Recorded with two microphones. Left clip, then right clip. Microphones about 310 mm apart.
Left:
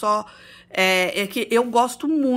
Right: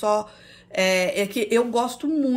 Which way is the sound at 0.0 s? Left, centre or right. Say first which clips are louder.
Left 1 dB; centre.